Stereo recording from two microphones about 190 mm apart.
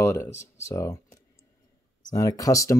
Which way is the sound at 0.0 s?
15° left (ahead or behind).